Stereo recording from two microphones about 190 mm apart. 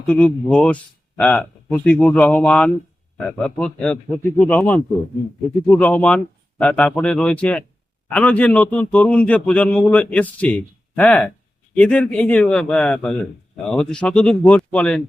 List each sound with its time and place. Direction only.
0.1 s a man's voice: 5° left (ahead or behind)